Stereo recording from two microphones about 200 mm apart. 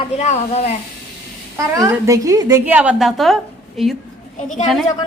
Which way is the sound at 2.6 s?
5° right (ahead or behind).